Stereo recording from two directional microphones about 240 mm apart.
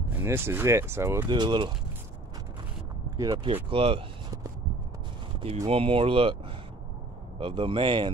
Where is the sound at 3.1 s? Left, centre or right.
Centre.